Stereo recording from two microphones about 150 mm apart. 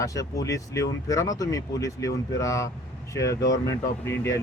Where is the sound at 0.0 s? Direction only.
20° left (ahead or behind).